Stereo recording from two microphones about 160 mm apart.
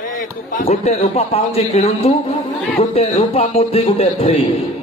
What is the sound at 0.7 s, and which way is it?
A man's voice, 40° left (ahead or behind).